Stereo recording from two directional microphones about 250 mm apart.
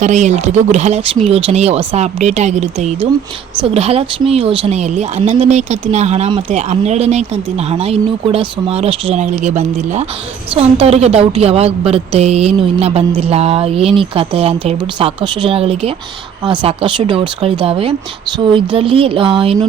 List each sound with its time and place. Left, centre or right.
0.0 s a woman's voice: right